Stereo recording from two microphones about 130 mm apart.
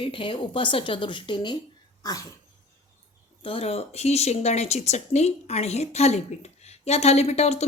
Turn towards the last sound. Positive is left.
turn(degrees=55)  # may be behind; listen again after turning